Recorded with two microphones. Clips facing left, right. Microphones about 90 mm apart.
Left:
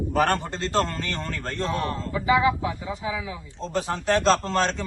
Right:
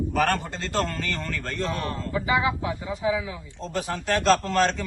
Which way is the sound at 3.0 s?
20° right (ahead or behind).